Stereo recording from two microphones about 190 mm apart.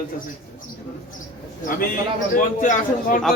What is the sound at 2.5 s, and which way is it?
Speech, 45° left (ahead or behind).